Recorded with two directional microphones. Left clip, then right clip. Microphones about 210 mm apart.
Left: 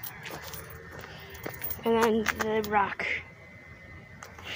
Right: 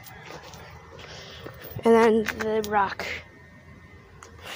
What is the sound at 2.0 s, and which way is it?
Speech, 45° right (ahead or behind).